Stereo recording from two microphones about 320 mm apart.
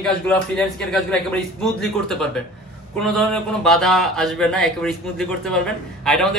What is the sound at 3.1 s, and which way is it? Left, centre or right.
Speech, centre.